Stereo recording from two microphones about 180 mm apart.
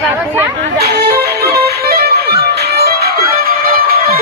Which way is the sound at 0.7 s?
65° right (ahead or behind).